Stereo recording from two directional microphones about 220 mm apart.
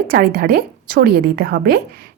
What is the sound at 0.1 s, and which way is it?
A woman's voice, 45° right (ahead or behind).